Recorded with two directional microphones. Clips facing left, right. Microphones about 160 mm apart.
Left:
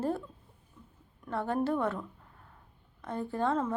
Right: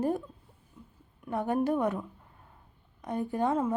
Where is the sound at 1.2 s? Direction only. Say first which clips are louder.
Right 2 dB; 15° right (ahead or behind).